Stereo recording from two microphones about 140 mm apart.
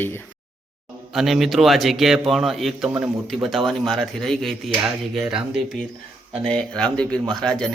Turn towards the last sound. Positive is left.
turn(degrees=5)  # may be behind; listen again after turning